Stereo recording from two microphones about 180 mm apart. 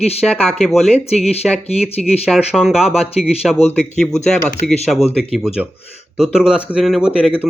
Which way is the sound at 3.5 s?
35° left (ahead or behind).